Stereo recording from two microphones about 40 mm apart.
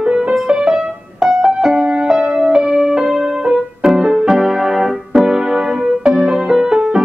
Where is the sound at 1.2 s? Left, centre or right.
Centre.